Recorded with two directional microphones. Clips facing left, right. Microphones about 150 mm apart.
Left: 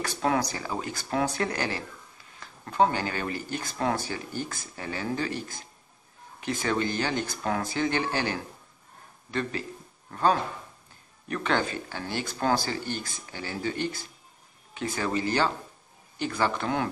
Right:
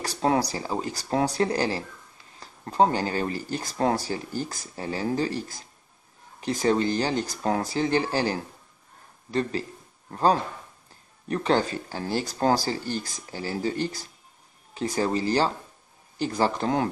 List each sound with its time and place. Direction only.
0.0 s speech: 35° right (ahead or behind)